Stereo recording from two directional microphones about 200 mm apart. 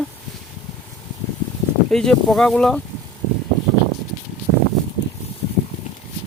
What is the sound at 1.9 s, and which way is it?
Speech, centre (ahead or behind).